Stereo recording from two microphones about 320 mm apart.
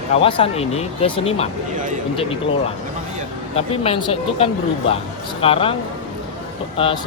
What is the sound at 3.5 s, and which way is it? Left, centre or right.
Speech, centre.